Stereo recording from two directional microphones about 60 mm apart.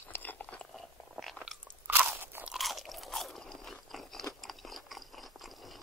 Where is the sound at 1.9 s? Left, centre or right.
Right.